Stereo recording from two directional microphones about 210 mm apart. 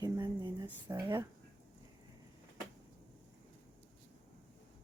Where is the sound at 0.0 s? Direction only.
15° right (ahead or behind).